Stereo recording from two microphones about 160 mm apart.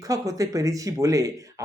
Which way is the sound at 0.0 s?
20° right (ahead or behind).